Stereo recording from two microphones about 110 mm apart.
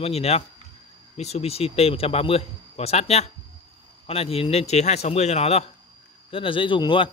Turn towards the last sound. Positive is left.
turn(degrees=50)  # may be behind; listen again after turning